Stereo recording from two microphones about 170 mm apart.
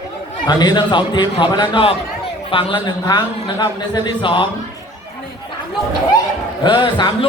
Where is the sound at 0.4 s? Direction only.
25° left (ahead or behind).